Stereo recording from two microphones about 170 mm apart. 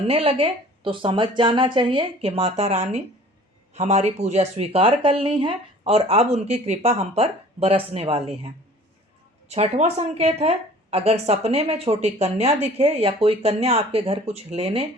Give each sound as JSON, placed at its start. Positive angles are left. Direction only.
{"t": 0.1, "sound": "speech", "side_deg": -35}
{"t": 9.5, "sound": "speech", "side_deg": -40}